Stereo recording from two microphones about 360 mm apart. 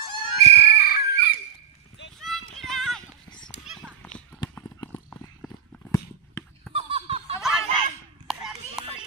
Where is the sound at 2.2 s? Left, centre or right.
Centre.